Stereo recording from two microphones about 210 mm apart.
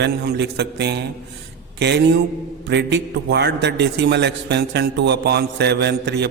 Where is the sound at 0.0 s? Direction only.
50° right (ahead or behind).